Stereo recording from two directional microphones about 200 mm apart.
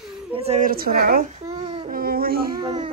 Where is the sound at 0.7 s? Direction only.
45° right (ahead or behind).